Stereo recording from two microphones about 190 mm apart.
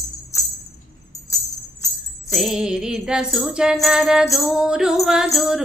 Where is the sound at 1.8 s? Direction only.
20° left (ahead or behind).